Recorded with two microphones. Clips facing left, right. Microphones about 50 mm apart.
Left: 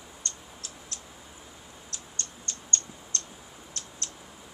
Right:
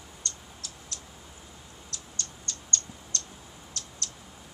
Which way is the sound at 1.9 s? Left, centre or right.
Left.